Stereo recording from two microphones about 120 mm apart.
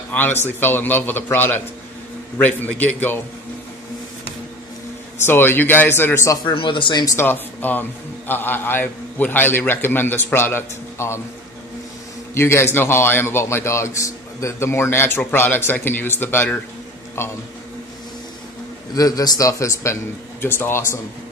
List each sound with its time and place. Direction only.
0.1 s a man's voice: 15° left (ahead or behind)
5.2 s a man's voice: 20° left (ahead or behind)
6.5 s speech: 45° left (ahead or behind)
7.2 s a man's voice: 15° left (ahead or behind)
12.4 s a man's voice: 20° left (ahead or behind)
18.9 s a man's voice: 30° left (ahead or behind)